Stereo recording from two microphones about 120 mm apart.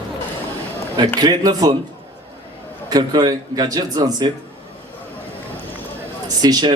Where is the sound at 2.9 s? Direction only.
35° right (ahead or behind).